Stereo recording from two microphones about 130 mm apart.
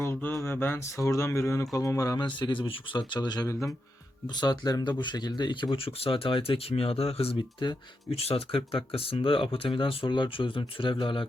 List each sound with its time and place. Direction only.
0.0 s speech: 15° left (ahead or behind)
2.2 s speech: 40° left (ahead or behind)
3.5 s speech: 20° left (ahead or behind)
4.4 s speech: 30° left (ahead or behind)